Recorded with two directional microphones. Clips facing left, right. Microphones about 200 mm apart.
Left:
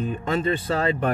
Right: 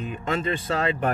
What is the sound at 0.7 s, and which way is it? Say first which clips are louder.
Speech: left 2 dB; 30° left (ahead or behind).